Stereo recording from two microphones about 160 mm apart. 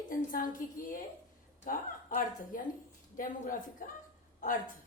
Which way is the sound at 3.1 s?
55° left (ahead or behind).